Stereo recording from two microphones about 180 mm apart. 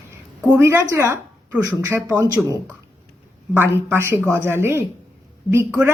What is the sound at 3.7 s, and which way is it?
Speech, 15° right (ahead or behind).